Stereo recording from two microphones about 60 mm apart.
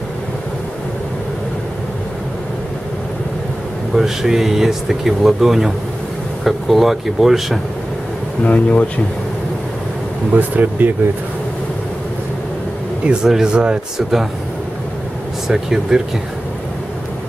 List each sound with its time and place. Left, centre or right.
3.9 s speech: centre
8.5 s speech: left
10.3 s speech: right
13.0 s speech: centre
15.4 s speech: centre